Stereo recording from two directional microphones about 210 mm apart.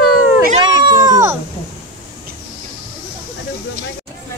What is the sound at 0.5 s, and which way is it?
Cat, 20° right (ahead or behind).